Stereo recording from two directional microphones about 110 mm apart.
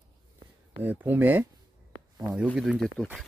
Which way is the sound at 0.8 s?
15° right (ahead or behind).